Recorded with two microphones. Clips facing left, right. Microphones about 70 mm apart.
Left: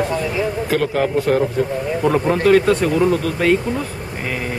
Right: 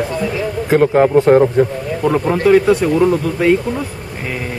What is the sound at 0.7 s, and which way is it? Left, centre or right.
Speech, right.